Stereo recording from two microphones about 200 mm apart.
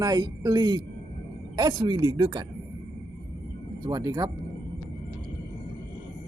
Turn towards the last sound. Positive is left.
turn(degrees=-20)  # may be behind; listen again after turning